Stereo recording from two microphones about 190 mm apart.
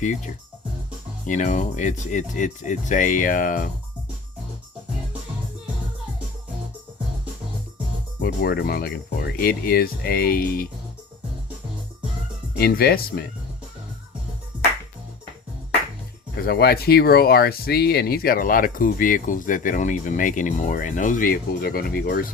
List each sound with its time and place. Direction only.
1.3 s speech: 40° left (ahead or behind)
8.2 s speech: 55° left (ahead or behind)
12.5 s speech: 55° left (ahead or behind)
16.5 s speech: 55° left (ahead or behind)